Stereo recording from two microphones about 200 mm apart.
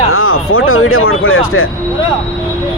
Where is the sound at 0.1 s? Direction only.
90° left.